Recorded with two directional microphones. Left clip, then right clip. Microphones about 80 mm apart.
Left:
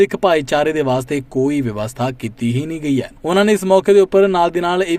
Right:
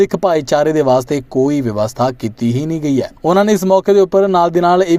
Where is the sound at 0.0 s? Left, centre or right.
Right.